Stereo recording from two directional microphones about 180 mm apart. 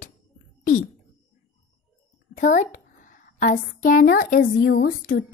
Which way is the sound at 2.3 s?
45° left (ahead or behind).